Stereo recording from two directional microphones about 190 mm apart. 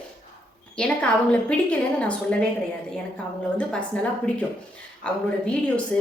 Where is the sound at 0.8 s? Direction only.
5° left (ahead or behind).